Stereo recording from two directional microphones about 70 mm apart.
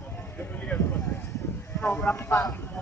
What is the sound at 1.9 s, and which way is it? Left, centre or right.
Speech, left.